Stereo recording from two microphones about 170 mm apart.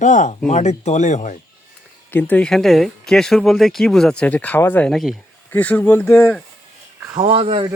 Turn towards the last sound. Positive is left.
turn(degrees=-35)  # may be behind; listen again after turning